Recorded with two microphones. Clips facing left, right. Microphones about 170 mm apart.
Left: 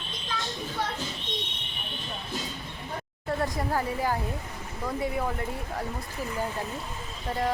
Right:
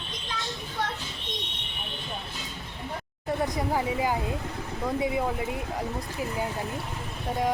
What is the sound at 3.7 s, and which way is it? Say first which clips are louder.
Speech: right 2 dB; 10° right (ahead or behind).